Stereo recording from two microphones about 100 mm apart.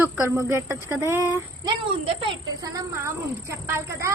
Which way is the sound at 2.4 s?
35° right (ahead or behind).